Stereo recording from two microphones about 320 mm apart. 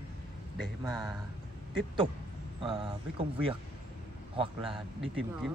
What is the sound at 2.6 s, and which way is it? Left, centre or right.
Speech, centre.